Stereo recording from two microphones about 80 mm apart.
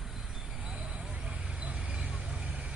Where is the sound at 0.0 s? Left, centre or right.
Centre.